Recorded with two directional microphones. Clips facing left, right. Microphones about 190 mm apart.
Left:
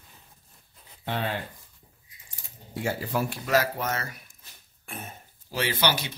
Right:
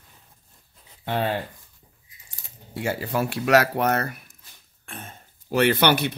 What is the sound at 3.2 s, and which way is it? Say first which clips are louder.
Speech: right 7 dB; 75° right (ahead or behind).